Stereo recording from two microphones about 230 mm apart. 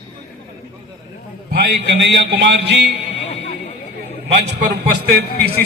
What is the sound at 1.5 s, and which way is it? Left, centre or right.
A man's voice, right.